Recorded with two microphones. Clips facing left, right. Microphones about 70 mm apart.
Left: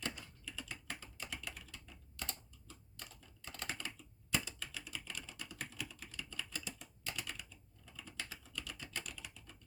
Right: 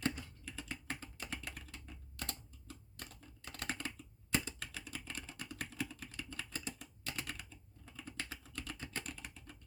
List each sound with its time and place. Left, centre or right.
0.0 s typing: right